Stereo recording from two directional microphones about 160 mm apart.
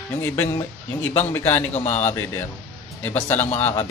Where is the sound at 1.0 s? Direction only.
15° left (ahead or behind).